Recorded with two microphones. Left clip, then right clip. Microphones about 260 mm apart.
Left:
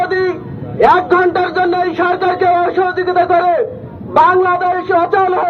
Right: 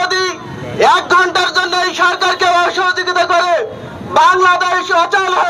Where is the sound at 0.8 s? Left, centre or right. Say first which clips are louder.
Even; right.